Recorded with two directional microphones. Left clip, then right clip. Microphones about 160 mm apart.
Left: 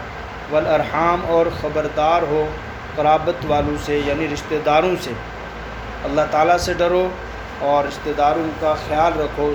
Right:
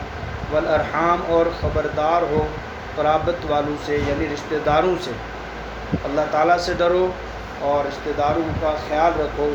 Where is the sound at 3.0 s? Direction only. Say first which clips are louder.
Left 3 dB; 25° left (ahead or behind).